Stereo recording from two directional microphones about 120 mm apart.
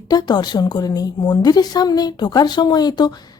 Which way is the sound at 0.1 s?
35° left (ahead or behind).